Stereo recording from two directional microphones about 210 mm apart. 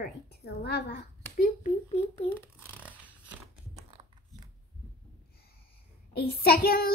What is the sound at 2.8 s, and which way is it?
Scissors, 5° right (ahead or behind).